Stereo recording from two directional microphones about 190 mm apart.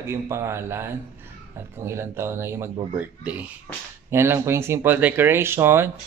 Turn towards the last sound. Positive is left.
turn(degrees=-10)  # may be behind; listen again after turning